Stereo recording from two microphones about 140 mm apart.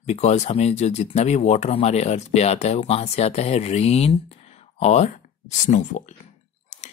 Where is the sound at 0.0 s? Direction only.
50° left (ahead or behind).